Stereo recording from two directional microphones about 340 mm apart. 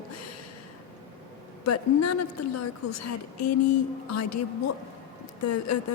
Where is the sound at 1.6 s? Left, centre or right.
Left.